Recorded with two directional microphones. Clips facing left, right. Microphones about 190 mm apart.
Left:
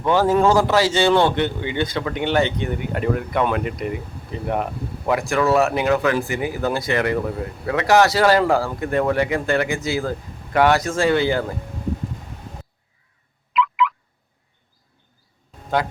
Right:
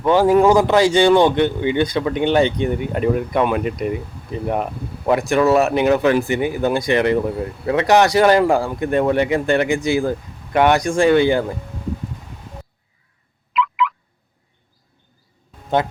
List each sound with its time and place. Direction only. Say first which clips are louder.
0.0 s speech: right 4 dB; 15° right (ahead or behind)
5.3 s speech: right 3 dB; 20° right (ahead or behind)
13.5 s fowl: even; centre (ahead or behind)